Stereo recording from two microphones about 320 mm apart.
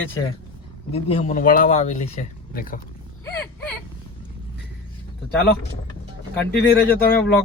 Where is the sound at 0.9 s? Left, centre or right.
Centre.